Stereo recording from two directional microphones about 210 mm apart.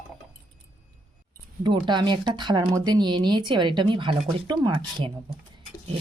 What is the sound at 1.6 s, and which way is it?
Speech, 20° right (ahead or behind).